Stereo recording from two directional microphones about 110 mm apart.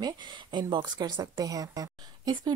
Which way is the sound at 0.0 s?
45° right (ahead or behind).